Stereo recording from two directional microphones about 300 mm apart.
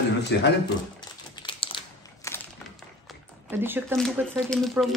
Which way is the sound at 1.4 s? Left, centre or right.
Centre.